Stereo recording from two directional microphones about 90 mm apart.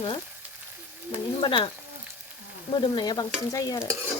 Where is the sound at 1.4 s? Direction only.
65° left (ahead or behind).